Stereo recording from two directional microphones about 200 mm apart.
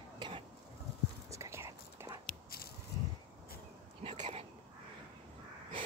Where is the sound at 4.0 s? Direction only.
30° right (ahead or behind).